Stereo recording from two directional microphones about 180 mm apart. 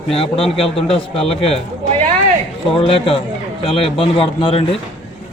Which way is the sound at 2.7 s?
30° left (ahead or behind).